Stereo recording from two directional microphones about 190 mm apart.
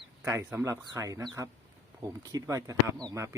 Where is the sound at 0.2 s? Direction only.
15° right (ahead or behind).